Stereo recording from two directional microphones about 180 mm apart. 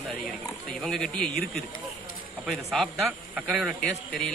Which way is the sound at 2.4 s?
Centre (ahead or behind).